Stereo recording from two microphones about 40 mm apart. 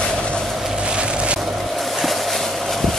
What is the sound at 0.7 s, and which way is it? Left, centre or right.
Vehicle, right.